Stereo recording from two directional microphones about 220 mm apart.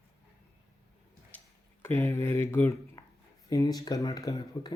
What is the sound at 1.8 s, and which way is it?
Speech, 10° left (ahead or behind).